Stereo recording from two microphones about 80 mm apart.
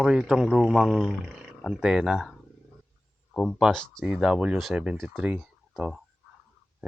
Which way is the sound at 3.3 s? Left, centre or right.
Centre.